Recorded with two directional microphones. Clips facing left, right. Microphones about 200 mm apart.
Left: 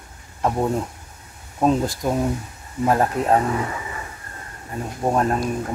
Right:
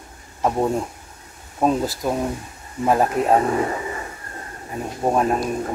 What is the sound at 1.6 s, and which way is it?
Speech, 5° right (ahead or behind).